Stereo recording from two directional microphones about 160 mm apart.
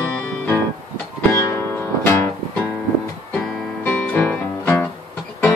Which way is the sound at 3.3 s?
5° left (ahead or behind).